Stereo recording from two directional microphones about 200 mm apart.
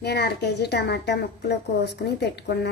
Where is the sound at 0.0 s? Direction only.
55° left (ahead or behind).